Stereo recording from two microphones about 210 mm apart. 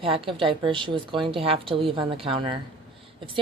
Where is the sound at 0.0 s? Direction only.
25° right (ahead or behind).